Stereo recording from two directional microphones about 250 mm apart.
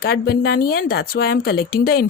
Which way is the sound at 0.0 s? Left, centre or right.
Left.